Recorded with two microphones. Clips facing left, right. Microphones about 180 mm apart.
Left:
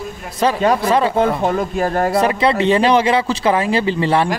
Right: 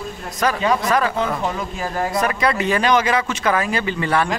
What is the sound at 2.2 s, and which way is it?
A man's voice, 25° left (ahead or behind).